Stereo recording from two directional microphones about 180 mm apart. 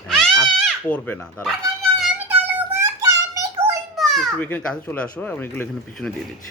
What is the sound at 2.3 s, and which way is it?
Music, 10° right (ahead or behind).